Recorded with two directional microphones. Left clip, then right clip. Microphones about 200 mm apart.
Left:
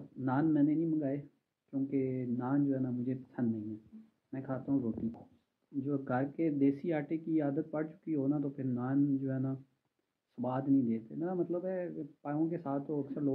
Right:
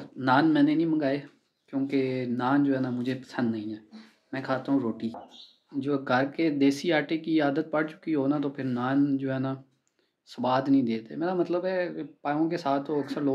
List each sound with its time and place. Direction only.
0.2 s speech: 15° right (ahead or behind)
5.8 s speech: 15° right (ahead or behind)